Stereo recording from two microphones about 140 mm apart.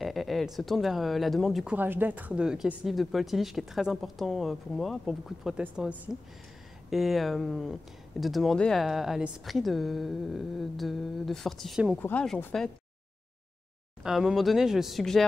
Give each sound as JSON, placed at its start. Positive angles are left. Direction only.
{"t": 0.0, "sound": "speech", "side_deg": 0}
{"t": 1.8, "sound": "speech", "side_deg": -15}
{"t": 12.0, "sound": "speech", "side_deg": 10}
{"t": 14.0, "sound": "speech", "side_deg": 0}